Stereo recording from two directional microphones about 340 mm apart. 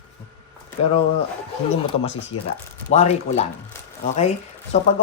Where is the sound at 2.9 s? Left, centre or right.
Centre.